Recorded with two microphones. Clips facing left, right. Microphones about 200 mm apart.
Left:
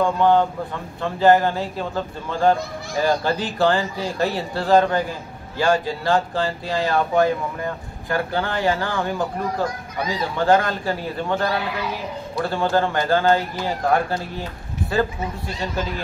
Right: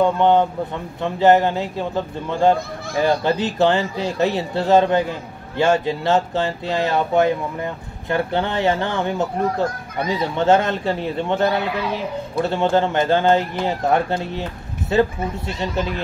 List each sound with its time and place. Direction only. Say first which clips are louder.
0.0 s speech: right 2 dB; 20° right (ahead or behind)